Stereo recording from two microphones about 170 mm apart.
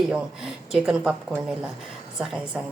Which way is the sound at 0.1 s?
5° right (ahead or behind).